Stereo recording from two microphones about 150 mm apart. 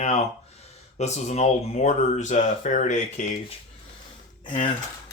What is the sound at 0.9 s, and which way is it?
Speech, 50° left (ahead or behind).